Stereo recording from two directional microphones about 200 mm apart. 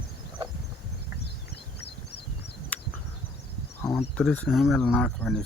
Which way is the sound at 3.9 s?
Centre (ahead or behind).